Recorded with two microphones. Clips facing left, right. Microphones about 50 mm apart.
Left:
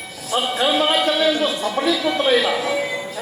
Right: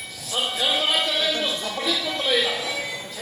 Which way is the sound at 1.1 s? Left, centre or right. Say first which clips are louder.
Left 6 dB; left.